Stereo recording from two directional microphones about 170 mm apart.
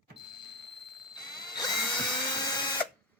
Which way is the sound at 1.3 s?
25° left (ahead or behind).